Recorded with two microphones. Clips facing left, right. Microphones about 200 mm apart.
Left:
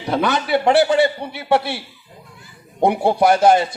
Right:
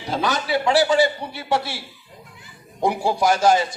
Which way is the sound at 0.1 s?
60° left (ahead or behind).